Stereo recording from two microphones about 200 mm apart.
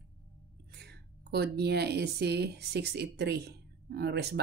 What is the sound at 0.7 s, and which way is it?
Speech, 55° right (ahead or behind).